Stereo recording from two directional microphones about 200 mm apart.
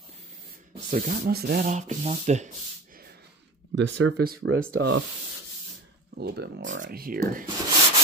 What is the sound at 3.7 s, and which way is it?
Speech, 65° right (ahead or behind).